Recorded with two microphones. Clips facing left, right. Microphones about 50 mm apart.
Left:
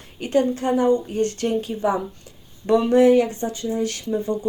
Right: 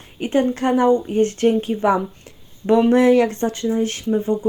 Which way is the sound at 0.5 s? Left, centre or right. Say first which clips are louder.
Right 3 dB; right.